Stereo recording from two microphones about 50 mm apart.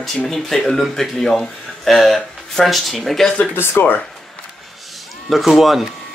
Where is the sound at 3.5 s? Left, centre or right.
Left.